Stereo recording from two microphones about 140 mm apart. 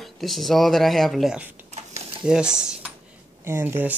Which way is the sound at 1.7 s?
50° right (ahead or behind).